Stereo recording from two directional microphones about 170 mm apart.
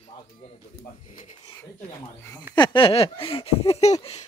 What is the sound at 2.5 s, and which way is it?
Speech, 25° left (ahead or behind).